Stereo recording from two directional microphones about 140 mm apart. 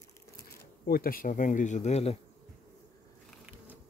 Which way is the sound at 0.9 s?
90° left.